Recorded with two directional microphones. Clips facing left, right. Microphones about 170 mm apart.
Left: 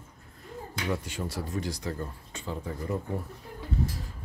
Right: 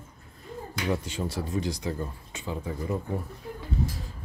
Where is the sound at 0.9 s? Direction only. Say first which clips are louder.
Right 3 dB; 25° right (ahead or behind); by 2.9 s 10° right (ahead or behind).